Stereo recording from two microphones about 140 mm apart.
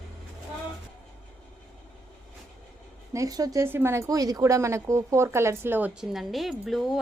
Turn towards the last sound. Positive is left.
turn(degrees=0)  # may be behind; listen again after turning